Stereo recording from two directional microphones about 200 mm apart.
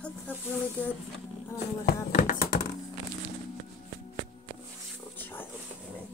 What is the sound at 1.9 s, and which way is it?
Speech, 45° left (ahead or behind).